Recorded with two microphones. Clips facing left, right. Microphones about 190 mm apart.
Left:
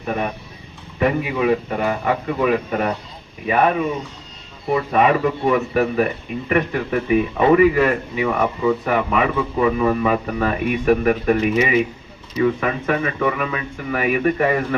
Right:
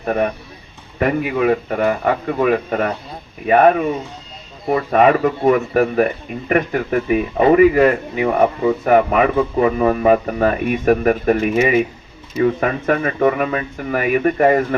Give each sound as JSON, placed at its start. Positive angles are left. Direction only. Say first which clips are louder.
{"t": 0.0, "sound": "a man's voice", "louder": "right 5 dB", "side_deg": -55}